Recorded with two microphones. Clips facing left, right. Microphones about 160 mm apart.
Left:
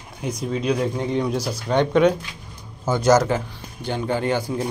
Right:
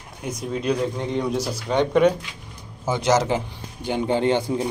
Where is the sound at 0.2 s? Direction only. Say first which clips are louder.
Left 2 dB; centre (ahead or behind).